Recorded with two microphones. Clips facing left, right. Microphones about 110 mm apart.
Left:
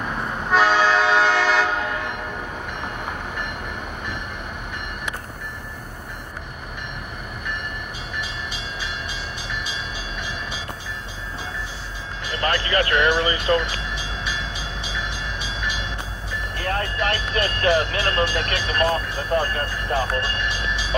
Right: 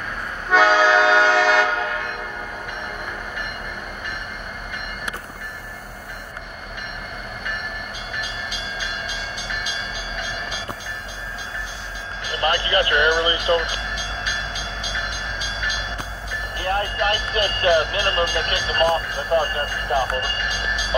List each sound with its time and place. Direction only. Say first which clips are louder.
0.5 s train: right 2 dB; centre (ahead or behind)
12.4 s vehicle: right 2 dB; 25° right (ahead or behind)
12.7 s music: even; 20° right (ahead or behind)
13.2 s vehicle: right 1 dB; 25° right (ahead or behind)
16.5 s vehicle: right 3 dB; 30° right (ahead or behind)
17.9 s speech: right 1 dB; 30° right (ahead or behind)